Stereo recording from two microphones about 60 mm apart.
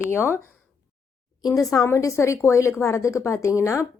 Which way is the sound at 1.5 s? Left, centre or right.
Left.